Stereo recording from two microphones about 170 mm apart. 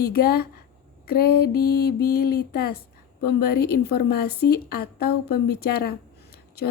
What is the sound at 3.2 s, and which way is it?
A woman's voice, 65° left (ahead or behind).